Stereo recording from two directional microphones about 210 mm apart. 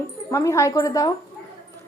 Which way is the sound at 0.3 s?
15° left (ahead or behind).